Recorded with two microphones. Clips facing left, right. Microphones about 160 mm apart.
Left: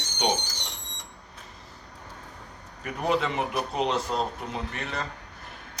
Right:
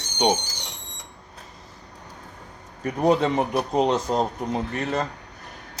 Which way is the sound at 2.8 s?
40° right (ahead or behind).